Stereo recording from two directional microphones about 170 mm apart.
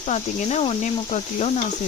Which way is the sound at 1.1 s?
40° left (ahead or behind).